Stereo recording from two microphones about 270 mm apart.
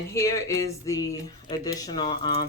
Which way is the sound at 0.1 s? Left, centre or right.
Centre.